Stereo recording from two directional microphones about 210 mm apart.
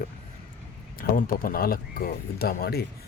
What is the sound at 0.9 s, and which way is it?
A man's voice, 45° left (ahead or behind).